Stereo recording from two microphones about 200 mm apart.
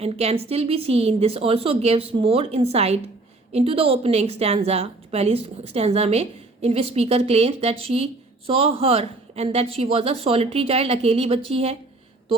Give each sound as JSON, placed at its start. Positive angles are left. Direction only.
{"t": 0.0, "sound": "a woman's voice", "side_deg": -30}